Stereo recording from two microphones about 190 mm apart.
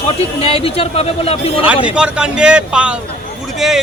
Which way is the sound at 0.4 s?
30° left (ahead or behind).